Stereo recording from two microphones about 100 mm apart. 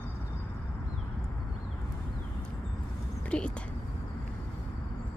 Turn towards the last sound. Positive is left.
turn(degrees=10)  # may be behind; listen again after turning